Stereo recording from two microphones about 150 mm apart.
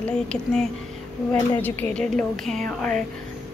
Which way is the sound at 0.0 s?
5° left (ahead or behind).